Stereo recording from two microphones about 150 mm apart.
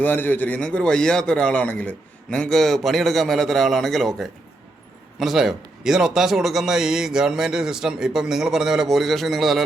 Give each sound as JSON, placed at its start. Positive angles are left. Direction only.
{"t": 0.0, "sound": "a man's voice", "side_deg": 10}